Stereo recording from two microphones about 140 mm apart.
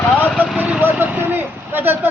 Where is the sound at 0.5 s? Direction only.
10° right (ahead or behind).